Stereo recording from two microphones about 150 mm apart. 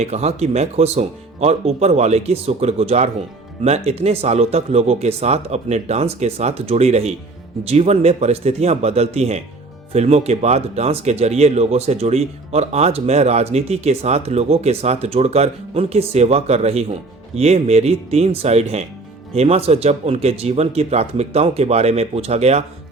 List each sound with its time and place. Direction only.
0.0 s speech: 45° right (ahead or behind)